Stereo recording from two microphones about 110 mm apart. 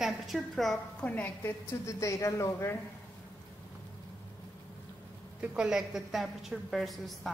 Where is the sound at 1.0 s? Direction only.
15° left (ahead or behind).